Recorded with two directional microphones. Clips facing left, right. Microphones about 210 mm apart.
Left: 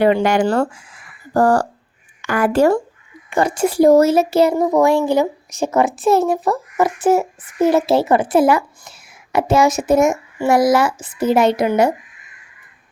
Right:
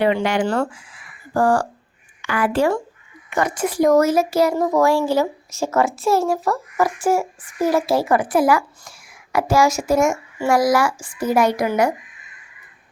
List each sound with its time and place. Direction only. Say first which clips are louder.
0.0 s speech: left 4 dB; 45° left (ahead or behind)
3.2 s a child's voice: left 4 dB; 30° left (ahead or behind)